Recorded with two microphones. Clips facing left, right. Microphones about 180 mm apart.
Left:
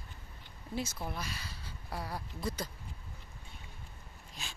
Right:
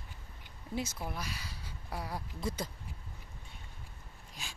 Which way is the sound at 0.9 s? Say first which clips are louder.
Even; 10° right (ahead or behind).